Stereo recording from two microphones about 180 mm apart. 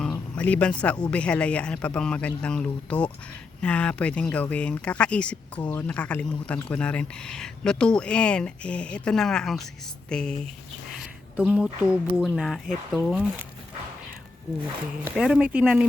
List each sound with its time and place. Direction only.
0.0 s speech: 5° left (ahead or behind)
11.0 s a sound: 5° right (ahead or behind)
12.2 s speech: centre (ahead or behind)
15.1 s speech: 5° right (ahead or behind)